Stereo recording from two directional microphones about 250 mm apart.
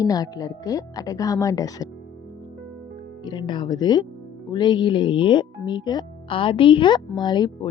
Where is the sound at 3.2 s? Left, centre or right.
Centre.